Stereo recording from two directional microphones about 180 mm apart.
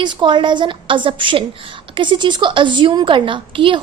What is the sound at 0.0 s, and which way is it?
A woman's voice, 25° right (ahead or behind).